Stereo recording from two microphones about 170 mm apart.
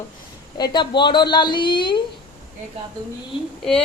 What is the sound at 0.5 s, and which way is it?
A woman's voice, 25° left (ahead or behind).